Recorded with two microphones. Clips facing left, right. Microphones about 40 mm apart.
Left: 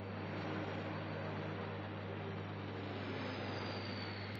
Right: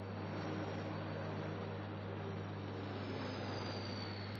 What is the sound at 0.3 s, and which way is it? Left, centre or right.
Vehicle, left.